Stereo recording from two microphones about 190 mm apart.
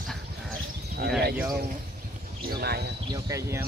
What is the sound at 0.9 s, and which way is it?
Speech, 55° right (ahead or behind).